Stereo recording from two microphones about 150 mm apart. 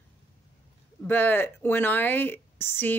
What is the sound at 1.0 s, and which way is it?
Speech, 10° left (ahead or behind).